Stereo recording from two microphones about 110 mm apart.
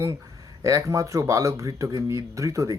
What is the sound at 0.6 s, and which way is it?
Speech, 30° right (ahead or behind).